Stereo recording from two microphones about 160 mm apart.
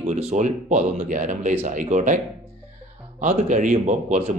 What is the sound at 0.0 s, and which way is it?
A man's voice, 50° right (ahead or behind).